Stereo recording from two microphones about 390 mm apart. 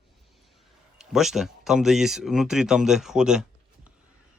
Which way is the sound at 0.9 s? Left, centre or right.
Centre.